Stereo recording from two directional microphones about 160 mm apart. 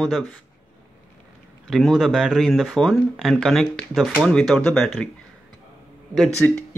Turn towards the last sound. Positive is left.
turn(degrees=5)  # may be behind; listen again after turning